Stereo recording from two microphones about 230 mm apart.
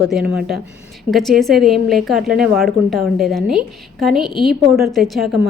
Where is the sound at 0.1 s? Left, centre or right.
Centre.